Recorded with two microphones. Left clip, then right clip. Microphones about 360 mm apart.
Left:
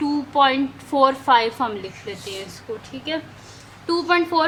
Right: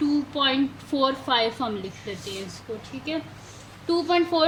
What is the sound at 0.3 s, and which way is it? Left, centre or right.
A woman's voice, centre.